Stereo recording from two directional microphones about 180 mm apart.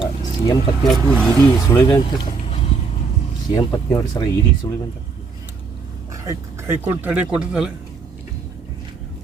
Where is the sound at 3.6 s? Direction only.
20° left (ahead or behind).